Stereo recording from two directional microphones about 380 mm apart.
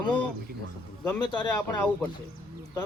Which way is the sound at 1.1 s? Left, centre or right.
Centre.